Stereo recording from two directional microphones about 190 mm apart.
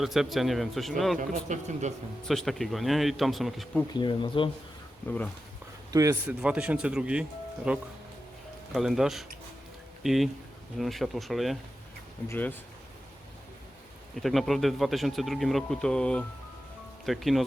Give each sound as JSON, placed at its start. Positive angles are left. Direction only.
{"t": 0.0, "sound": "speech", "side_deg": 0}
{"t": 1.5, "sound": "speech", "side_deg": -40}
{"t": 2.2, "sound": "speech", "side_deg": 0}
{"t": 3.9, "sound": "speech", "side_deg": 25}
{"t": 5.0, "sound": "speech", "side_deg": 10}
{"t": 5.9, "sound": "a man's voice", "side_deg": -15}
{"t": 12.3, "sound": "speech", "side_deg": 10}
{"t": 14.2, "sound": "speech", "side_deg": 0}